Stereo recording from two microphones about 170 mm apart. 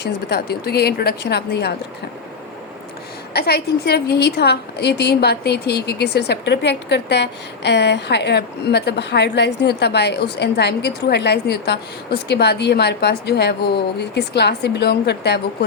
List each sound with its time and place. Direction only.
0.0 s a woman's voice: 75° left (ahead or behind)
3.3 s a woman's voice: 70° left (ahead or behind)